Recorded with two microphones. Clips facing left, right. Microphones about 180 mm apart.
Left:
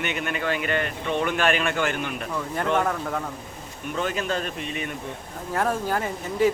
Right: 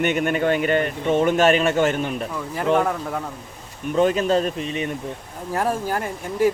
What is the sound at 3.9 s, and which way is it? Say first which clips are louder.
Speech: right 9 dB; 35° right (ahead or behind).